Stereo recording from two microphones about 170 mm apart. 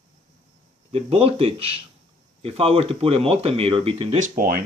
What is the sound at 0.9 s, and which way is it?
Speech, 35° right (ahead or behind).